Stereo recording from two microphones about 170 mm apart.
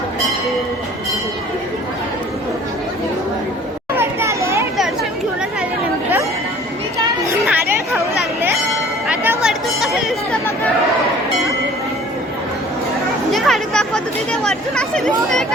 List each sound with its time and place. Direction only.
3.9 s children playing: 15° right (ahead or behind)
7.0 s a sound: 20° right (ahead or behind)
7.4 s chatter: 10° right (ahead or behind)
9.0 s chatter: 10° right (ahead or behind)
13.3 s a sound: centre (ahead or behind)
14.4 s chatter: 5° left (ahead or behind)